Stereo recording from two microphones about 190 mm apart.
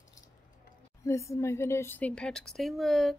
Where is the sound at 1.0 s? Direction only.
15° left (ahead or behind).